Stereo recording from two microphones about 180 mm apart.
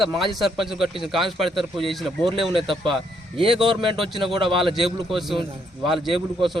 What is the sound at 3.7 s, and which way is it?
Speech, 30° right (ahead or behind).